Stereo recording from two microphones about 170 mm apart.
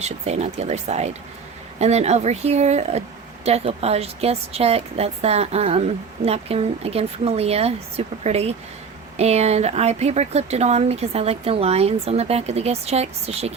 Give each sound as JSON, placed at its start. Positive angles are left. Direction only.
{"t": 0.0, "sound": "speech", "side_deg": -40}